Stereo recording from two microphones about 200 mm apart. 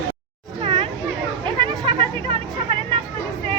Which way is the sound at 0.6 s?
25° right (ahead or behind).